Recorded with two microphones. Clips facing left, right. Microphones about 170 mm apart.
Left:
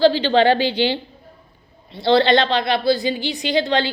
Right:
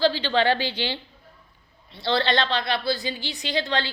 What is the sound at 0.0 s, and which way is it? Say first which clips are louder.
Speech: left 7 dB; 50° left (ahead or behind).